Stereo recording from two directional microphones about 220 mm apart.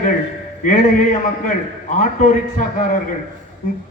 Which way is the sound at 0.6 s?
35° left (ahead or behind).